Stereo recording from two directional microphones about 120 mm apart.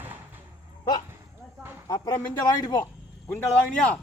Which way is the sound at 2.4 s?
35° left (ahead or behind).